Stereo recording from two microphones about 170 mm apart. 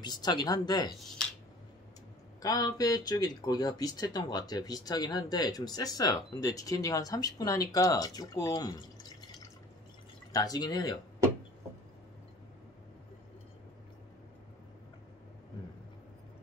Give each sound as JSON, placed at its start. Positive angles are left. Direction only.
{"t": 0.0, "sound": "speech", "side_deg": 25}
{"t": 2.4, "sound": "speech", "side_deg": 20}
{"t": 10.3, "sound": "speech", "side_deg": 20}